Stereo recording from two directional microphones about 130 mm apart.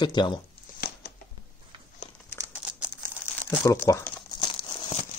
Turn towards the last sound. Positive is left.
turn(degrees=35)  # may be behind; listen again after turning